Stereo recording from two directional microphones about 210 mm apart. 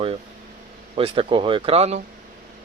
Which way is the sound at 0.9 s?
25° right (ahead or behind).